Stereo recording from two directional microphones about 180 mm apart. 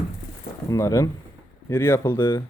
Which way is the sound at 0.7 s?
15° left (ahead or behind).